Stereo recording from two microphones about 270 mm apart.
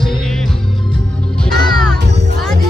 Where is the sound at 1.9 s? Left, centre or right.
Right.